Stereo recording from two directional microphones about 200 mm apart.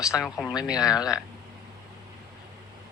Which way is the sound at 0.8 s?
20° left (ahead or behind).